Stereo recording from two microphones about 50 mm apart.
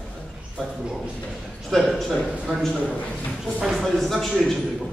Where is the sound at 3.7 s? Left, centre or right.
Centre.